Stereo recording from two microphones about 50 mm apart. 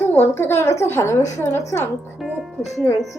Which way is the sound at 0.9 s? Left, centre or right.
Left.